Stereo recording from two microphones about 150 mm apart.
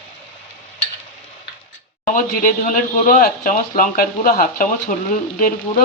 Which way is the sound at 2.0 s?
60° left (ahead or behind).